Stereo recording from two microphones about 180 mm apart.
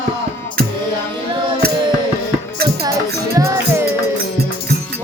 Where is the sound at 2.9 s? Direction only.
20° right (ahead or behind).